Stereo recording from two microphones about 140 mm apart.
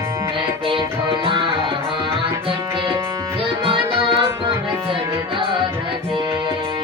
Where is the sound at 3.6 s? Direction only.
40° right (ahead or behind).